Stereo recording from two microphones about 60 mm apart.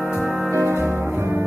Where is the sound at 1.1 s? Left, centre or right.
Right.